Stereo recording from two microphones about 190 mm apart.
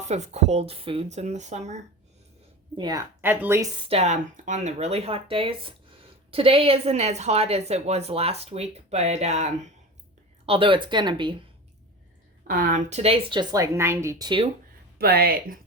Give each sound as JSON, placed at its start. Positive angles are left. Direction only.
{"t": 0.1, "sound": "a woman's voice", "side_deg": -35}
{"t": 2.7, "sound": "a woman's voice", "side_deg": -20}
{"t": 3.2, "sound": "speech", "side_deg": -10}
{"t": 3.8, "sound": "a woman's voice", "side_deg": -35}
{"t": 12.5, "sound": "a woman's voice", "side_deg": -45}
{"t": 14.9, "sound": "speech", "side_deg": -55}